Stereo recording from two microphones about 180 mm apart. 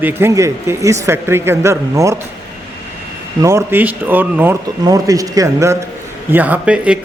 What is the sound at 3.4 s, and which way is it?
A man's voice, 15° right (ahead or behind).